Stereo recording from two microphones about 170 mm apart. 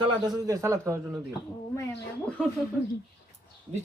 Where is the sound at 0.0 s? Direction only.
20° right (ahead or behind).